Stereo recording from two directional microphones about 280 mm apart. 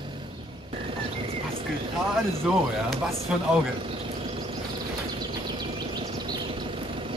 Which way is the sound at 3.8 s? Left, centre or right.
Centre.